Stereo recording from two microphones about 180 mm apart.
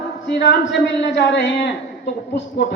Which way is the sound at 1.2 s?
70° left (ahead or behind).